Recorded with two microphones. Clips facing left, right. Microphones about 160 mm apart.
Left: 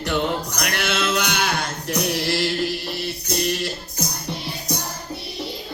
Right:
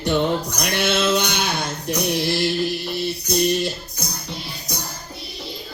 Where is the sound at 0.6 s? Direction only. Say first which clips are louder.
Right 4 dB; 25° right (ahead or behind).